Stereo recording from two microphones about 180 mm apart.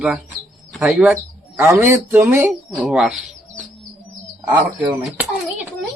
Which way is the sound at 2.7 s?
5° right (ahead or behind).